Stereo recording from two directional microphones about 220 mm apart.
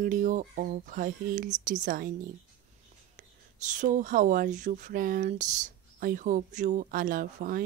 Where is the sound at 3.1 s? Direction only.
35° right (ahead or behind).